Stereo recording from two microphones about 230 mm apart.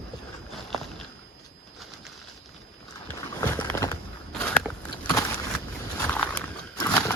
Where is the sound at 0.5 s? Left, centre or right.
Centre.